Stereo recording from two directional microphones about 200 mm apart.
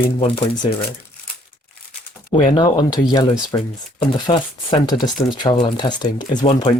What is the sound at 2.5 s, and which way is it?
Speech, 20° left (ahead or behind).